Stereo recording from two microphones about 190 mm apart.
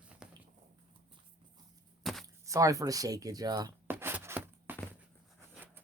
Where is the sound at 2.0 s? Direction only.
Centre (ahead or behind).